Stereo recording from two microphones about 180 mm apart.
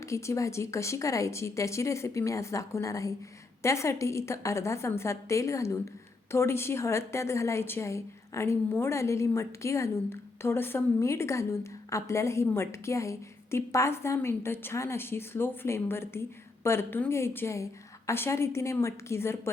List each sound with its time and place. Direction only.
0.0 s a woman's voice: 15° left (ahead or behind)